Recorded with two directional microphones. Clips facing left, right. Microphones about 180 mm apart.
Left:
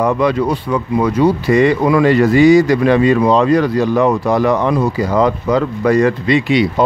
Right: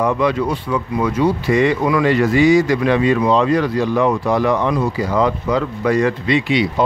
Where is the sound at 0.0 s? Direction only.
40° left (ahead or behind).